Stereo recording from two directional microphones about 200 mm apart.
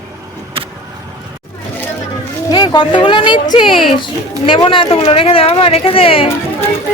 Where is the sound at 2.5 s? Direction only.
25° left (ahead or behind).